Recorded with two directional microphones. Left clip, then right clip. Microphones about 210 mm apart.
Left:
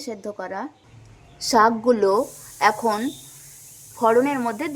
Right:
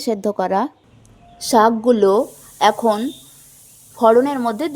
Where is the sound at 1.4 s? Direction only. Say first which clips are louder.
Right 3 dB; 20° right (ahead or behind).